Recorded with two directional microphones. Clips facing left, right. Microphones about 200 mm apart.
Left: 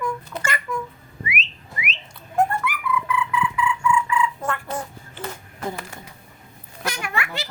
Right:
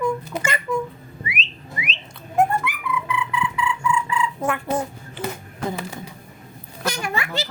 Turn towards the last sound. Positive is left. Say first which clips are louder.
# right 2 dB
turn(degrees=-35)  # may be behind; listen again after turning